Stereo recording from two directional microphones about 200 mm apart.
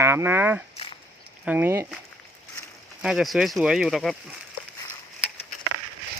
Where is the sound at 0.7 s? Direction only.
30° left (ahead or behind).